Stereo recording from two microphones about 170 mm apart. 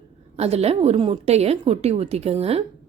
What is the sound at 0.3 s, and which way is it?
A woman's voice, 40° right (ahead or behind).